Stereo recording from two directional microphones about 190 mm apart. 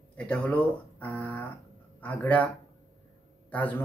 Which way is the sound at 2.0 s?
10° left (ahead or behind).